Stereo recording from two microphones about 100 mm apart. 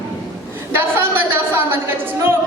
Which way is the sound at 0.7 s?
20° right (ahead or behind).